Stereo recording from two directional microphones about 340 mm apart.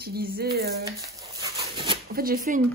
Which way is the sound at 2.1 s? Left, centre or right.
Right.